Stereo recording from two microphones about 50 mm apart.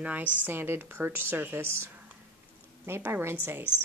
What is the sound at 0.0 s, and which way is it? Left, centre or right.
Speech, right.